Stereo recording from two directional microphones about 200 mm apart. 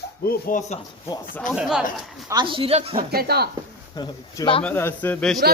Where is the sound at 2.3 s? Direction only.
25° right (ahead or behind).